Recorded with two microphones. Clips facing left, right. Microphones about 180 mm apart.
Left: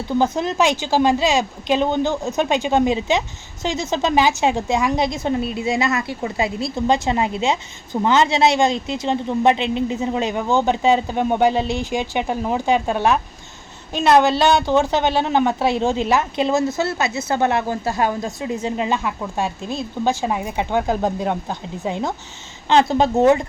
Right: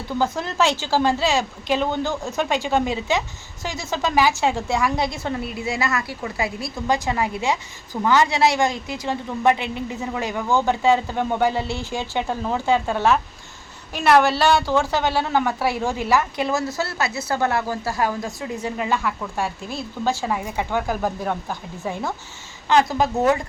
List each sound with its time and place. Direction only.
0.2 s a woman's voice: 20° left (ahead or behind)